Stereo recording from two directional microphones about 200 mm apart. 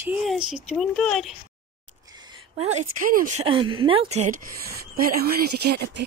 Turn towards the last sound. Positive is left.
turn(degrees=-55)  # may be behind; listen again after turning